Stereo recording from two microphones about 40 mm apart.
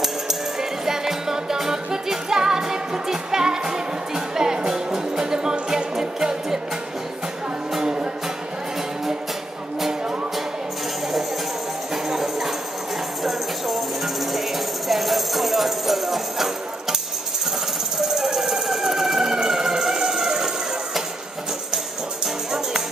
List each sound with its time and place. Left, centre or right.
0.0 s music: centre
9.8 s music: centre
11.9 s music: centre
18.0 s a sound: centre